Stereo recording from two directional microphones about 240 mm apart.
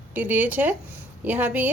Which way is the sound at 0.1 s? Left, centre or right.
Centre.